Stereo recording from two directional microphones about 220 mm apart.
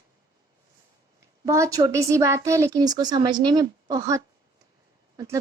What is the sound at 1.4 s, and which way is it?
Speech, 15° right (ahead or behind).